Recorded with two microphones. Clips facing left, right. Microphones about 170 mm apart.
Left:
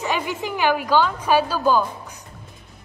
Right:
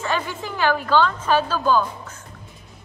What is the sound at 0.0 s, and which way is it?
A woman's voice, 15° left (ahead or behind).